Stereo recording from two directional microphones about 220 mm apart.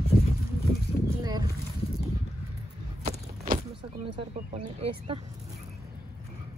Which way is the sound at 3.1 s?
35° right (ahead or behind).